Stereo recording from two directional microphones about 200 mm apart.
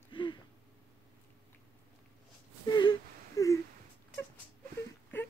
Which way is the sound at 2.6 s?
20° left (ahead or behind).